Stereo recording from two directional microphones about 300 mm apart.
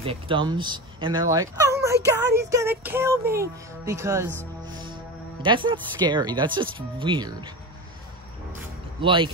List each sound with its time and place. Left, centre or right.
0.0 s speech: centre
2.0 s music: centre
5.4 s music: centre
9.0 s music: centre